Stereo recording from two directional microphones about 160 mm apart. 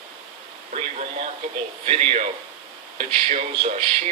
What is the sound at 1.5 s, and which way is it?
Speech, 40° right (ahead or behind).